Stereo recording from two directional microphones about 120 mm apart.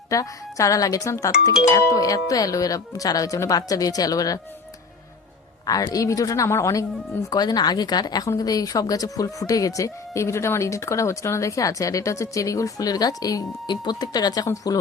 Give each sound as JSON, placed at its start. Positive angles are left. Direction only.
{"t": 0.1, "sound": "a woman's voice", "side_deg": 25}
{"t": 5.6, "sound": "a woman's voice", "side_deg": 30}
{"t": 7.3, "sound": "a woman's voice", "side_deg": 35}